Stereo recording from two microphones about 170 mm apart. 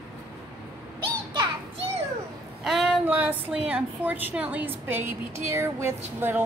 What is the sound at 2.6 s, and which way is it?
A woman's voice, centre (ahead or behind).